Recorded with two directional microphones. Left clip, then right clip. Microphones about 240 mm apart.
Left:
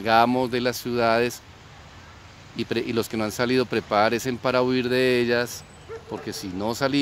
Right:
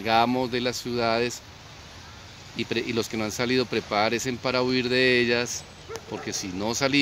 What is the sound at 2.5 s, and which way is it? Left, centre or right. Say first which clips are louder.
Speech: left 2 dB; centre.